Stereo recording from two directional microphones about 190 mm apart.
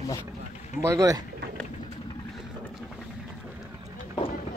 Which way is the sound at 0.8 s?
15° right (ahead or behind).